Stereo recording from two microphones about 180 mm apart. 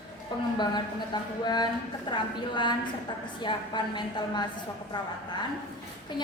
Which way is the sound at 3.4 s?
25° left (ahead or behind).